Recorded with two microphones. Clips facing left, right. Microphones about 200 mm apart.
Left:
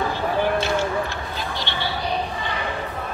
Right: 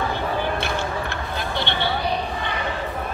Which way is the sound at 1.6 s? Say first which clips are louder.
Right 6 dB; 60° right (ahead or behind).